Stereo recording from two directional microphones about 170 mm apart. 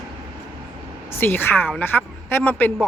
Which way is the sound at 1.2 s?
10° left (ahead or behind).